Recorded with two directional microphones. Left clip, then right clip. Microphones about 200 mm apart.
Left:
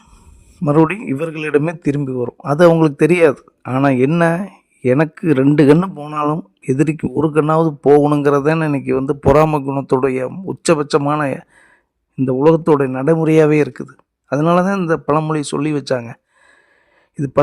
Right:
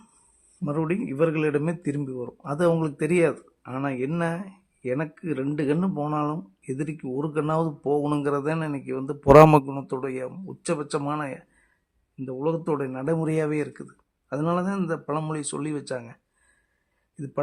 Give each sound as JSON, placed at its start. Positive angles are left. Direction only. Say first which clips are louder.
{"t": 0.6, "sound": "speech", "louder": "left 13 dB", "side_deg": 50}
{"t": 6.1, "sound": "speech", "louder": "left 9 dB", "side_deg": 45}
{"t": 7.4, "sound": "speech", "louder": "left 12 dB", "side_deg": 40}
{"t": 9.3, "sound": "a man's voice", "louder": "right 1 dB", "side_deg": 0}
{"t": 9.6, "sound": "speech", "louder": "left 14 dB", "side_deg": 40}
{"t": 12.1, "sound": "speech", "louder": "left 15 dB", "side_deg": 60}
{"t": 17.2, "sound": "speech", "louder": "left 15 dB", "side_deg": 50}